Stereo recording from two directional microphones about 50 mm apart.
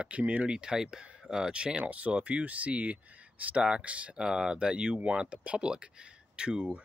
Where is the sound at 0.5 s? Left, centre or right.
Centre.